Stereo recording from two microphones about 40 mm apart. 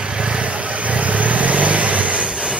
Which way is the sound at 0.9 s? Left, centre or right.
Right.